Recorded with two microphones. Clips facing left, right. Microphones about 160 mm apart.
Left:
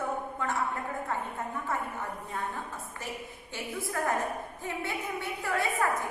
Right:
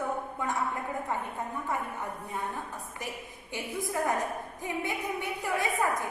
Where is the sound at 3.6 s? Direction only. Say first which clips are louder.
Right 2 dB; 15° right (ahead or behind).